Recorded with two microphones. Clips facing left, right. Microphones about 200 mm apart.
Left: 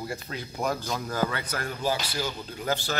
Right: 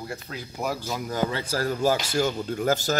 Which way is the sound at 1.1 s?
25° right (ahead or behind).